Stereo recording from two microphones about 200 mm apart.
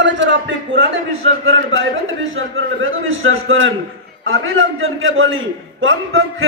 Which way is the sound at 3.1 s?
80° right.